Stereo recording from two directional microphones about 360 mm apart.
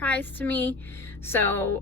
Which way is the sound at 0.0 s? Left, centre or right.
Centre.